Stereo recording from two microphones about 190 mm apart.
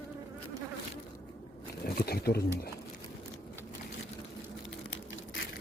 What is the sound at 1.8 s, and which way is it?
Wild animals, 55° left (ahead or behind).